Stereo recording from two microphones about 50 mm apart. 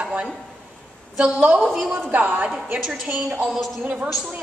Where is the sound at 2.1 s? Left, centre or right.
Right.